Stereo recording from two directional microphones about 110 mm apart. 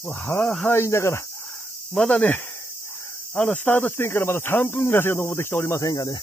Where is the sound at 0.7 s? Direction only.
25° left (ahead or behind).